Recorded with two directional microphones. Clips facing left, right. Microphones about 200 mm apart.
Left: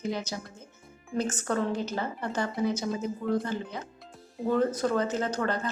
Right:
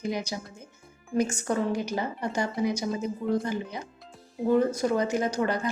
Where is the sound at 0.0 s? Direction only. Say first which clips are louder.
Right 1 dB; 15° right (ahead or behind).